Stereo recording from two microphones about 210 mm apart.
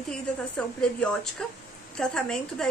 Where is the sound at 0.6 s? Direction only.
5° left (ahead or behind).